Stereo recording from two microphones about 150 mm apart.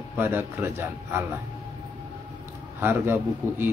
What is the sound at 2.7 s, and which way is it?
Speech, 15° right (ahead or behind).